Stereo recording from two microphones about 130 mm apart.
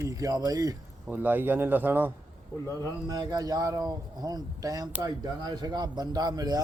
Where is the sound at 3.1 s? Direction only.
30° right (ahead or behind).